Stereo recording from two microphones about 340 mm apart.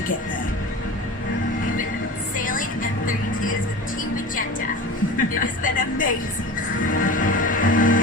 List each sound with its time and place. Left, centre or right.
2.4 s music: left
5.1 s music: left